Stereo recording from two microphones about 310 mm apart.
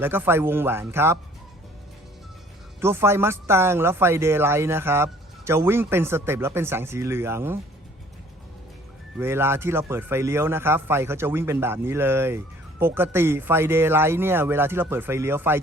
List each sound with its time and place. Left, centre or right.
0.0 s speech: centre
2.8 s speech: centre
9.1 s speech: centre